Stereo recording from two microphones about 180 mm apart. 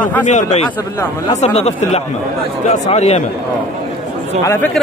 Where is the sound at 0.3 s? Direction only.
40° left (ahead or behind).